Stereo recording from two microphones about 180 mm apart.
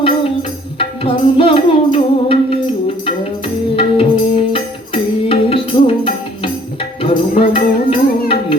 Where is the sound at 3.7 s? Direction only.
30° left (ahead or behind).